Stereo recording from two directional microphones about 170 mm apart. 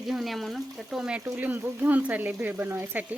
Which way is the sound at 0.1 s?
Centre (ahead or behind).